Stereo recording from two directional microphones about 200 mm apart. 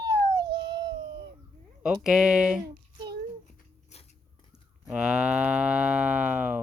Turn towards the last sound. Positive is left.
turn(degrees=-5)  # may be behind; listen again after turning